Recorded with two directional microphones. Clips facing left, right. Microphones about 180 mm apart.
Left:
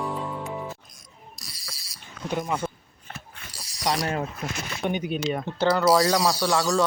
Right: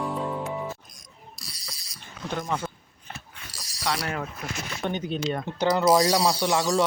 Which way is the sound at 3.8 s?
20° left (ahead or behind).